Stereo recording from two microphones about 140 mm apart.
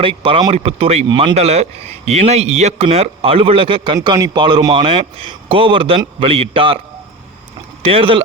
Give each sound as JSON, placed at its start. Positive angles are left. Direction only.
{"t": 0.0, "sound": "a man's voice", "side_deg": -40}
{"t": 3.9, "sound": "a man's voice", "side_deg": -30}
{"t": 7.8, "sound": "speech", "side_deg": -45}